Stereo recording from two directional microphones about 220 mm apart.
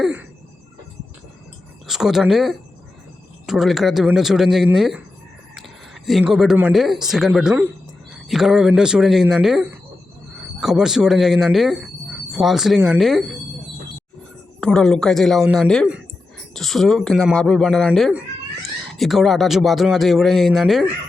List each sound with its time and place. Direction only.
0.0 s a sound: 5° right (ahead or behind)
1.9 s speech: centre (ahead or behind)
14.6 s speech: 5° left (ahead or behind)